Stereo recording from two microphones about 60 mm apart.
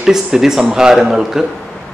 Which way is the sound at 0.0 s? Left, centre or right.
Centre.